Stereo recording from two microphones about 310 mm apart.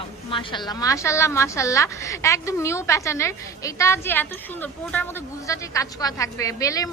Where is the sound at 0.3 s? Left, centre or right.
Centre.